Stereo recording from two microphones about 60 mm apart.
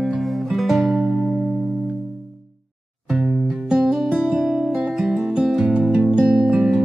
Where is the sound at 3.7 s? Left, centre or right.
Centre.